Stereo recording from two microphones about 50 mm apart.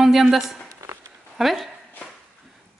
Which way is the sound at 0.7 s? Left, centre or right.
Right.